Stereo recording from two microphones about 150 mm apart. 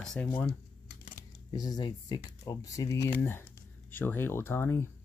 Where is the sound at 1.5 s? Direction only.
25° left (ahead or behind).